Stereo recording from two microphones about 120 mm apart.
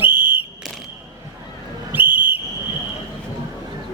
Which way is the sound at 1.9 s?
15° right (ahead or behind).